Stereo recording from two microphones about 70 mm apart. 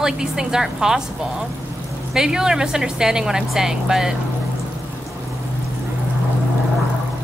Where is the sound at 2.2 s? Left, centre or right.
Centre.